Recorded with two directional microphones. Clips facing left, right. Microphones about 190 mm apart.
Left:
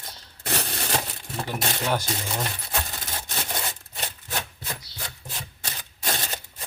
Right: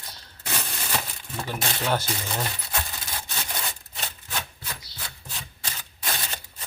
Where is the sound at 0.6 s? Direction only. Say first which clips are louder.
Left 2 dB; 40° left (ahead or behind).